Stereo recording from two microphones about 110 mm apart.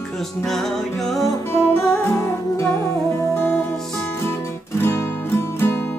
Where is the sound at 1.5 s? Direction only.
25° left (ahead or behind).